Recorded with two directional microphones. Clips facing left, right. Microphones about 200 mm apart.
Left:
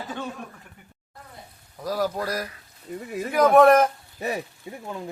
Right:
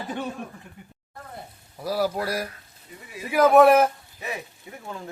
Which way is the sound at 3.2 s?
5° right (ahead or behind).